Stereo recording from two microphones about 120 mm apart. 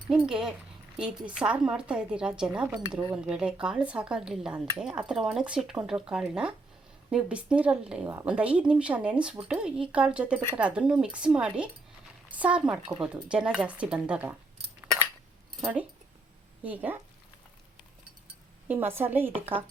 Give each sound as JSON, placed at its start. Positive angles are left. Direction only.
{"t": 0.1, "sound": "speech", "side_deg": -5}
{"t": 16.6, "sound": "speech", "side_deg": -15}
{"t": 18.7, "sound": "speech", "side_deg": -20}